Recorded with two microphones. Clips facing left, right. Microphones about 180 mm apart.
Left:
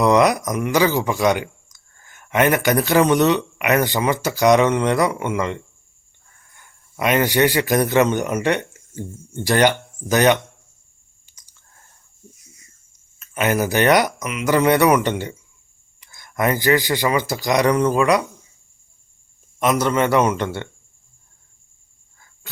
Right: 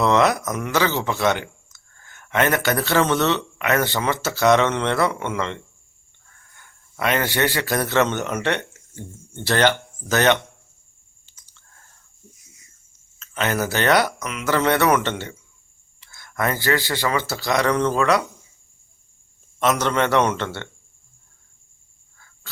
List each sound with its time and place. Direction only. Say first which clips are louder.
0.0 s a man's voice: left 3 dB; 15° left (ahead or behind)
11.3 s a sound: left 1 dB; 15° left (ahead or behind)
13.1 s speech: left 4 dB; 15° left (ahead or behind)
19.5 s speech: left 2 dB; 10° left (ahead or behind)